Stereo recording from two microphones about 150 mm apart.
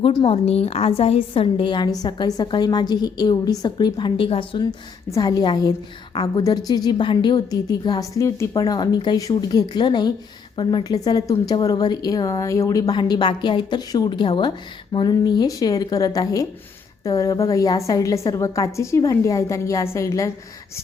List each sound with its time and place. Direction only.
0.3 s a woman's voice: 40° left (ahead or behind)
5.1 s speech: 25° left (ahead or behind)